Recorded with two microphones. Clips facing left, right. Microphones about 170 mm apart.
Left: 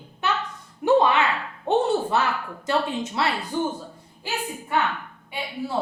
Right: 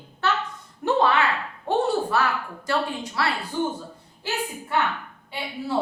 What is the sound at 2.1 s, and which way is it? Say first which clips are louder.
A woman's voice: even; 20° left (ahead or behind).